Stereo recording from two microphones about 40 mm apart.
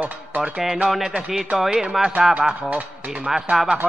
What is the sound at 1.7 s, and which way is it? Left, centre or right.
Speech, centre.